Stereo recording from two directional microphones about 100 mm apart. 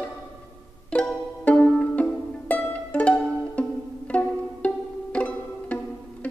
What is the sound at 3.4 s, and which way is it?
Pizzicato, 15° left (ahead or behind).